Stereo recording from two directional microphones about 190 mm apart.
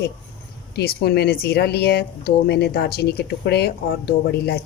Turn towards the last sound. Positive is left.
turn(degrees=55)  # may be behind; listen again after turning